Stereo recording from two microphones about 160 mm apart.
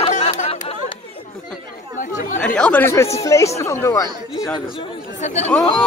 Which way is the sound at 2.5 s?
10° left (ahead or behind).